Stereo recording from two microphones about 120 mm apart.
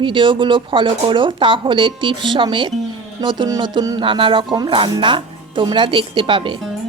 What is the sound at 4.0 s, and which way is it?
Speech, 45° right (ahead or behind).